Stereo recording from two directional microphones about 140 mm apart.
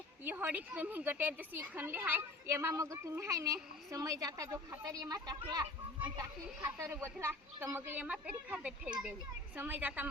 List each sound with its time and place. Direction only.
0.3 s speech: 10° right (ahead or behind); by 5.6 s 30° right (ahead or behind)
6.6 s speech: 15° right (ahead or behind)